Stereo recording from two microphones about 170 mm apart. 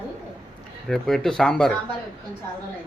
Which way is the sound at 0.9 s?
Centre (ahead or behind).